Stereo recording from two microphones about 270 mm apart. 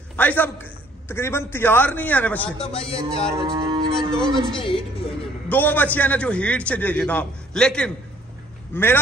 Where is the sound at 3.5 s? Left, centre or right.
Centre.